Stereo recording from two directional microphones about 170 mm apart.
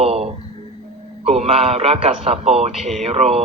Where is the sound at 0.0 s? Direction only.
35° right (ahead or behind).